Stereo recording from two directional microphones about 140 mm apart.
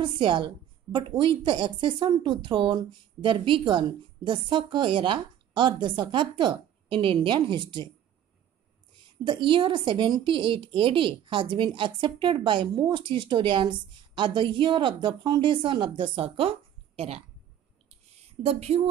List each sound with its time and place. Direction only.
0.0 s a woman's voice: 35° right (ahead or behind)
9.2 s a woman's voice: 35° right (ahead or behind)
18.4 s speech: 45° right (ahead or behind)